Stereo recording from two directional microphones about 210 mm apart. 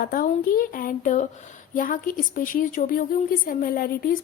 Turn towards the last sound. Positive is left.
turn(degrees=45)  # may be behind; listen again after turning